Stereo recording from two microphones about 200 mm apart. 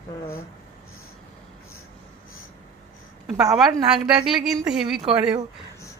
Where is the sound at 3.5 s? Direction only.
Centre (ahead or behind).